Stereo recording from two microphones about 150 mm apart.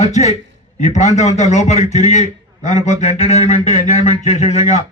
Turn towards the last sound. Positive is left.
turn(degrees=45)  # may be behind; listen again after turning